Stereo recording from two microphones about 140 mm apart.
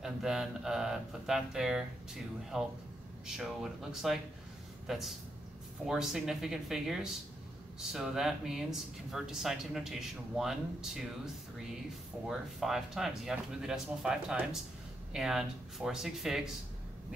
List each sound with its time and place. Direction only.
0.0 s speech: 5° right (ahead or behind)
12.3 s speech: centre (ahead or behind)